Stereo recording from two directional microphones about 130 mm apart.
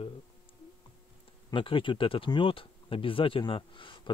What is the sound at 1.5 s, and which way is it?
Speech, 40° left (ahead or behind).